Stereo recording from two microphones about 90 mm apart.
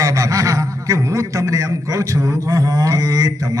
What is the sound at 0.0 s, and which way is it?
A man's voice, 40° right (ahead or behind).